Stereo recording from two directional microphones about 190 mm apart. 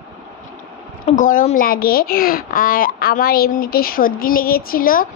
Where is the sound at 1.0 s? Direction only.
45° left (ahead or behind).